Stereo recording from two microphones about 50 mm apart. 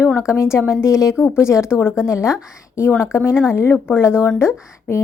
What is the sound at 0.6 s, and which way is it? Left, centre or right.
Speech, left.